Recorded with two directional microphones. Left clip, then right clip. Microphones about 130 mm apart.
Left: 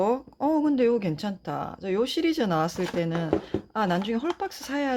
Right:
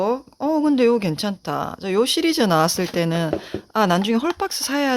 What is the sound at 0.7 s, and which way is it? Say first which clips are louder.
Speech: right 6 dB; 45° right (ahead or behind).